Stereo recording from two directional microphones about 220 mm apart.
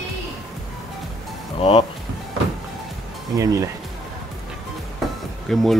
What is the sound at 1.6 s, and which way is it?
Speech, 25° left (ahead or behind).